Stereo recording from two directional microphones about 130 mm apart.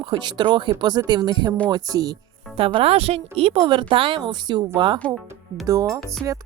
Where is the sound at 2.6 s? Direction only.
45° right (ahead or behind).